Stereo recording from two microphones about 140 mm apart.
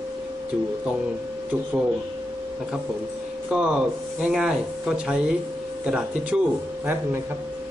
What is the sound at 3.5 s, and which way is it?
A man's voice, 5° right (ahead or behind).